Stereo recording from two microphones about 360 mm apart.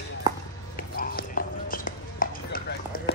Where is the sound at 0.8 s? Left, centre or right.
Left.